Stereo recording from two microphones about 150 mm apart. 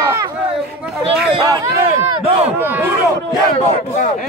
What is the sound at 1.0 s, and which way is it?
Speech, 35° right (ahead or behind).